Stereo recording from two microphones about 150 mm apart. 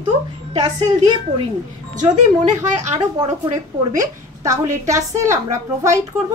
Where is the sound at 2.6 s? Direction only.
25° right (ahead or behind).